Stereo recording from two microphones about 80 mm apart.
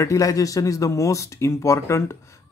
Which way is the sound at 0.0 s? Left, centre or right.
Left.